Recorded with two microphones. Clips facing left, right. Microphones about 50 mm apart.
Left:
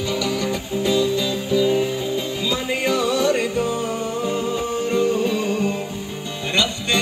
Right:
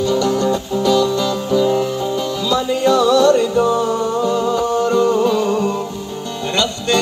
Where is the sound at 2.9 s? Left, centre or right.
Right.